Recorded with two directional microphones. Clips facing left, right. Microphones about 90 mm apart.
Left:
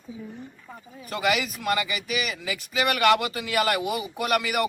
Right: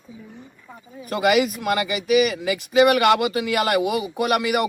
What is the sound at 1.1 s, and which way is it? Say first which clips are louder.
Speech: right 7 dB; 50° right (ahead or behind).